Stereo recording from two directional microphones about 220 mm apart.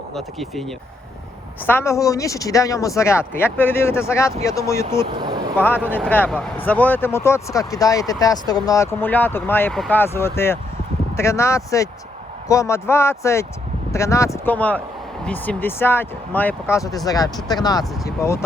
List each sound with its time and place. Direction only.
0.1 s speech: centre (ahead or behind)
1.6 s speech: 10° left (ahead or behind)
5.2 s vehicle: 20° right (ahead or behind)
5.5 s speech: 10° left (ahead or behind)